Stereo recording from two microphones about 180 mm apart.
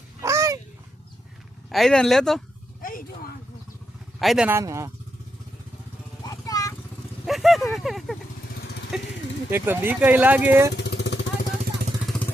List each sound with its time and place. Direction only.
0.2 s a sound: 15° right (ahead or behind)
1.7 s speech: 5° left (ahead or behind)
2.8 s vehicle: 50° left (ahead or behind)
4.2 s a man's voice: centre (ahead or behind)
4.4 s speech: 15° right (ahead or behind)
6.2 s vehicle: 20° left (ahead or behind)
7.3 s speech: centre (ahead or behind)
10.8 s vehicle: 70° left (ahead or behind)